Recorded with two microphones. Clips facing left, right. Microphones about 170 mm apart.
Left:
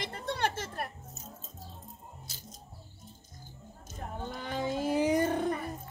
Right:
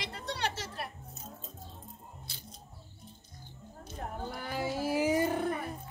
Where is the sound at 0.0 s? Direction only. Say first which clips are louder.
Left 3 dB; 50° left (ahead or behind).